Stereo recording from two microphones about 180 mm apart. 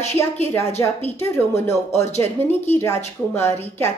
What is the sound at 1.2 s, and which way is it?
Speech, 15° left (ahead or behind).